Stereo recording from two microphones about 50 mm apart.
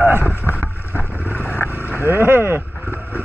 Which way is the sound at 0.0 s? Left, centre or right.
Right.